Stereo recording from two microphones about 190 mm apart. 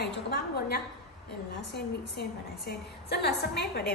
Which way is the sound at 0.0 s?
60° left (ahead or behind).